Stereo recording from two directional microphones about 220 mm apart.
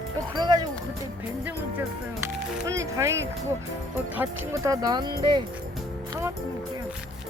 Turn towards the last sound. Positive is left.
turn(degrees=-20)  # may be behind; listen again after turning